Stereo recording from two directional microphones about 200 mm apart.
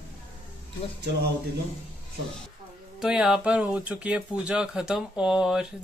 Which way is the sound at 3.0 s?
5° right (ahead or behind).